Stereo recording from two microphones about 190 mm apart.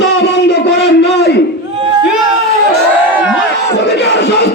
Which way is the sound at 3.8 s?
60° left (ahead or behind).